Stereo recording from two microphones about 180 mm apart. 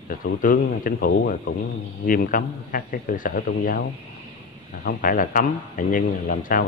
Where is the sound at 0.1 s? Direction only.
50° left (ahead or behind).